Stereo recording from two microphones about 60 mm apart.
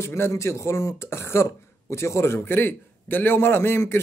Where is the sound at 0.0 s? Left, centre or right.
Left.